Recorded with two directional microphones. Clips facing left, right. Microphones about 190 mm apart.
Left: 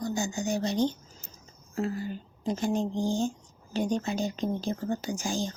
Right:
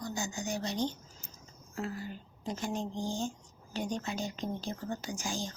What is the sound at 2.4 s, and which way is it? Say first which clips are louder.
Speech: left 7 dB; 30° left (ahead or behind).